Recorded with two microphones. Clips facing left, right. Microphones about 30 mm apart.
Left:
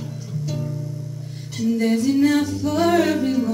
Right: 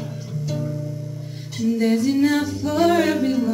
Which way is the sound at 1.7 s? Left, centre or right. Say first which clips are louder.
Even; centre.